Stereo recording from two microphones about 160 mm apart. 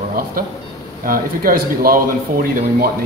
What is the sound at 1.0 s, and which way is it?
Speech, 60° right (ahead or behind).